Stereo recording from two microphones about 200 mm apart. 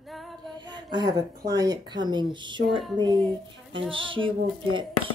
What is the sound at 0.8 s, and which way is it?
Speech, 20° right (ahead or behind).